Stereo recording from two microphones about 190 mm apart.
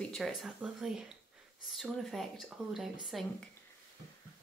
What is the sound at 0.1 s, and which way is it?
Speech, centre (ahead or behind).